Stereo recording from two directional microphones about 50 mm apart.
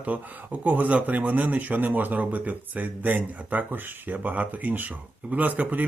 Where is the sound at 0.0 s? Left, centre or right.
Right.